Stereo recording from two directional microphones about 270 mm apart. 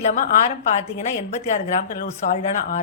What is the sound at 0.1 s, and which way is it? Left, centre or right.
Speech, left.